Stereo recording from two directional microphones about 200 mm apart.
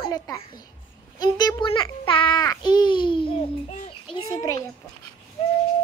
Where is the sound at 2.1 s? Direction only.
25° left (ahead or behind).